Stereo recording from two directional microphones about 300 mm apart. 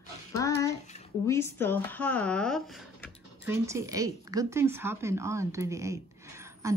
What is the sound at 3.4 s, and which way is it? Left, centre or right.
Speech, centre.